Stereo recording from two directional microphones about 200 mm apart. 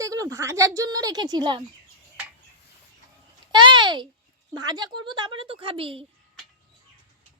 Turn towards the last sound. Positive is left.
turn(degrees=-25)  # may be behind; listen again after turning